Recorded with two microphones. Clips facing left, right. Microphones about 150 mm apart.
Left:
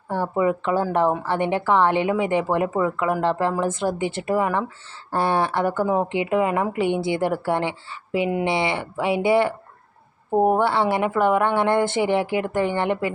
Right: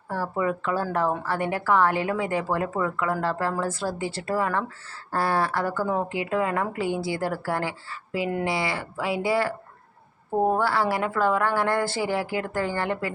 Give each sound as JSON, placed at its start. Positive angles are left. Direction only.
{"t": 0.1, "sound": "speech", "side_deg": 20}